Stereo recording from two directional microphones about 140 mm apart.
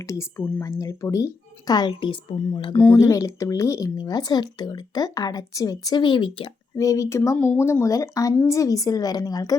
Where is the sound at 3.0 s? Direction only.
25° left (ahead or behind).